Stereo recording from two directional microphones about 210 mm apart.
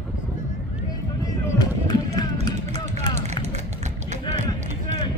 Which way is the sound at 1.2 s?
15° left (ahead or behind).